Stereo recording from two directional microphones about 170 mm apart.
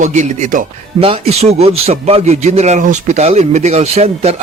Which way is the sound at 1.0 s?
35° right (ahead or behind).